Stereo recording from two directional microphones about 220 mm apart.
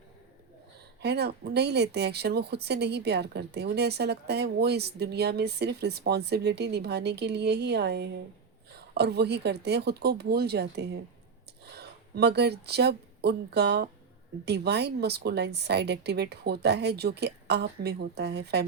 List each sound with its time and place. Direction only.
1.0 s speech: 50° right (ahead or behind)